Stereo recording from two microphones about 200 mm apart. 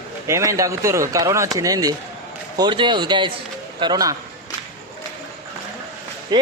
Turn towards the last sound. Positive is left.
turn(degrees=-20)  # may be behind; listen again after turning